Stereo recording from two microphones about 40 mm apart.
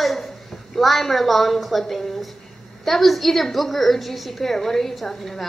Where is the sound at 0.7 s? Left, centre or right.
Centre.